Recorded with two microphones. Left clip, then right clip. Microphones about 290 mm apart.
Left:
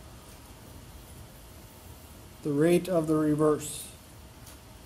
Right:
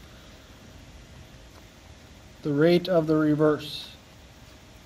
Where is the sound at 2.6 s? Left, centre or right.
Right.